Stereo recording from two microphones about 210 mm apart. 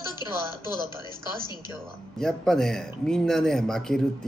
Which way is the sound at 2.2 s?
5° left (ahead or behind).